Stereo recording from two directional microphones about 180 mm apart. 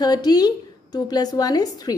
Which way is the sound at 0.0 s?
20° left (ahead or behind).